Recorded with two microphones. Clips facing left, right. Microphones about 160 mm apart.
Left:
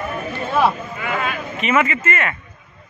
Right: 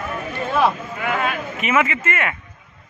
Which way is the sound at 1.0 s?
50° right (ahead or behind).